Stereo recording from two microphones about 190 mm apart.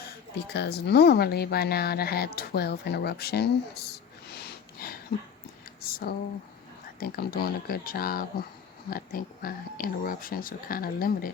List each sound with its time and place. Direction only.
0.5 s speech: 60° left (ahead or behind)
3.9 s snort: 55° left (ahead or behind)
5.8 s a sound: 50° left (ahead or behind)
7.0 s speech: 50° left (ahead or behind)